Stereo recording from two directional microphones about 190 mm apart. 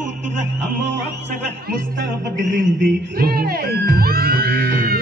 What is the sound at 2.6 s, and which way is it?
Music, 55° right (ahead or behind).